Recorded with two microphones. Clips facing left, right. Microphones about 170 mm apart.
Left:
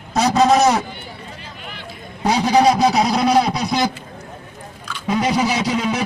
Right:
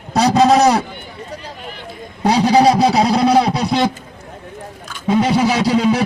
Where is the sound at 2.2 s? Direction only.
35° right (ahead or behind).